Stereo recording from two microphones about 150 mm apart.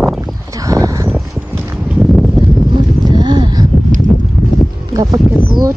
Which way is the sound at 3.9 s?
60° right (ahead or behind).